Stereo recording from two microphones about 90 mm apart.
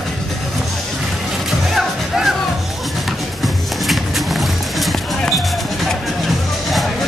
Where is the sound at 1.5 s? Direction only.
5° right (ahead or behind).